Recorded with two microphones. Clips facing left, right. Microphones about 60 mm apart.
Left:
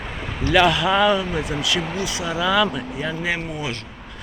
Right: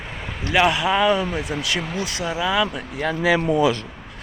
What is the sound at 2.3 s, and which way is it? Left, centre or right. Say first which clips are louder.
Speech: left 2 dB; centre.